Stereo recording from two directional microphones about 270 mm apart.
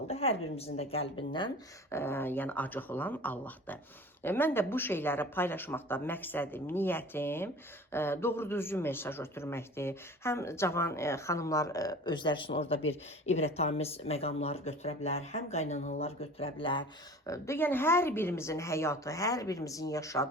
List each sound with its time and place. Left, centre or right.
0.1 s speech: left
1.9 s a man's voice: centre